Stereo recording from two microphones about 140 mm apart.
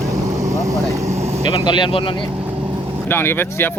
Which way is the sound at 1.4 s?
35° left (ahead or behind).